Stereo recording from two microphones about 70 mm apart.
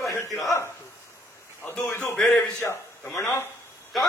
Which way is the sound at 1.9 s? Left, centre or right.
Left.